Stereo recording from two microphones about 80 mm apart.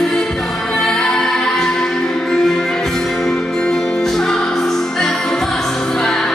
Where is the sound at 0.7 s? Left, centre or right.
Centre.